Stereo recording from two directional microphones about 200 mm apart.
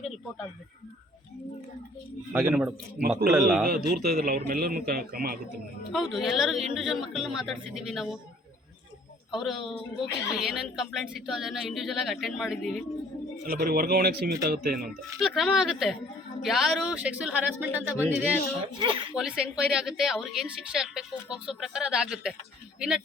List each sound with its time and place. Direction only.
2.3 s a woman's voice: 5° right (ahead or behind)
3.7 s a man's voice: 50° right (ahead or behind)
5.9 s a woman's voice: centre (ahead or behind)
9.3 s a woman's voice: centre (ahead or behind)
9.9 s speech: 25° left (ahead or behind)
10.3 s a woman's voice: centre (ahead or behind)
13.5 s a man's voice: 50° right (ahead or behind)
15.4 s a woman's voice: centre (ahead or behind)
18.8 s speech: 25° right (ahead or behind)
19.1 s a woman's voice: 5° right (ahead or behind)